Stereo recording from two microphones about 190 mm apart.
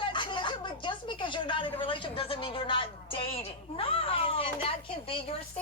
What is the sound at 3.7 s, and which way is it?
Cat, 30° left (ahead or behind).